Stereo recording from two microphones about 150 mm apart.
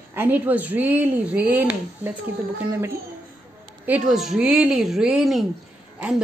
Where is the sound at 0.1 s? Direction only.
15° right (ahead or behind).